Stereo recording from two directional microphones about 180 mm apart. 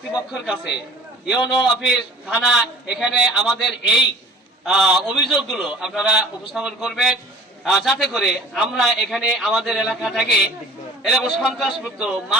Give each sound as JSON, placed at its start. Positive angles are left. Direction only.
{"t": 0.1, "sound": "a man's voice", "side_deg": -5}
{"t": 1.8, "sound": "a man's voice", "side_deg": -5}